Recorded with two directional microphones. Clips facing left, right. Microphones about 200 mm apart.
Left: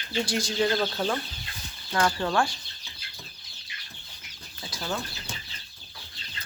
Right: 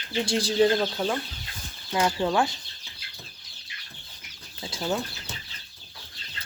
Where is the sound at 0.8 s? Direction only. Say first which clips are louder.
Right 1 dB; 10° right (ahead or behind).